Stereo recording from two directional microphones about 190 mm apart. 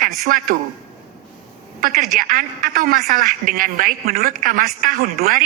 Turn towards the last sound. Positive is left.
turn(degrees=-50)  # may be behind; listen again after turning